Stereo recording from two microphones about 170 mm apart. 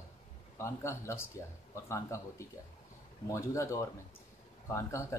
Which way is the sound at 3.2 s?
15° left (ahead or behind).